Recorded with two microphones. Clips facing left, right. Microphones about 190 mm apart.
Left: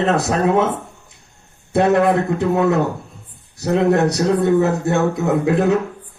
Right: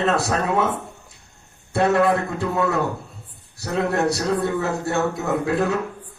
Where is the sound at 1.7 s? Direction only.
20° left (ahead or behind).